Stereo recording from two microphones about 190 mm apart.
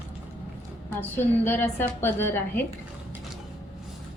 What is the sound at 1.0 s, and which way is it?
A woman's voice, 10° left (ahead or behind).